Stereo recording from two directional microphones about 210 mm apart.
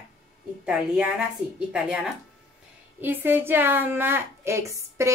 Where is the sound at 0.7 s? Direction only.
5° right (ahead or behind).